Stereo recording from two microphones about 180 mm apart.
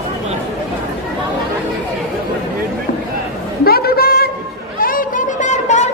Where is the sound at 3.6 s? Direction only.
60° left (ahead or behind).